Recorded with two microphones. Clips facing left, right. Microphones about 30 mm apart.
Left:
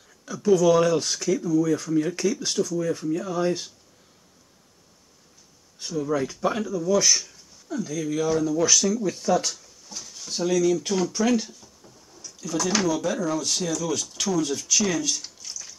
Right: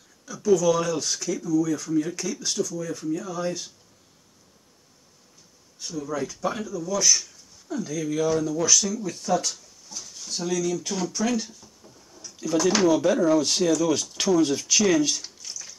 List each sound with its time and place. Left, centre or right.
0.6 s speech: left
1.1 s speech: centre
1.5 s speech: left
5.8 s speech: left
6.7 s speech: centre
7.6 s speech: centre
10.9 s a sound: centre
12.4 s speech: centre
15.2 s a sound: centre